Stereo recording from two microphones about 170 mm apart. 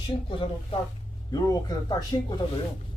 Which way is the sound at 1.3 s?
25° left (ahead or behind).